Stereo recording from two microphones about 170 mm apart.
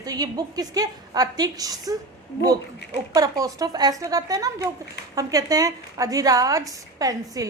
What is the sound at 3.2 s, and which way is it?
A woman's voice, 20° right (ahead or behind).